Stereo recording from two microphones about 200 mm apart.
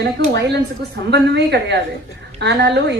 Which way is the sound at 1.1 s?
55° right (ahead or behind).